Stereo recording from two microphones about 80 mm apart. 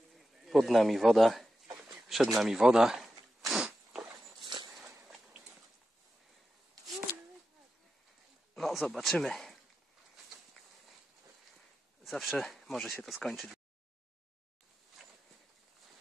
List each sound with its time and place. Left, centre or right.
0.1 s speech: centre
1.9 s a sound: centre
4.4 s dog: right
8.5 s speech: centre
12.0 s speech: centre
15.0 s walk: centre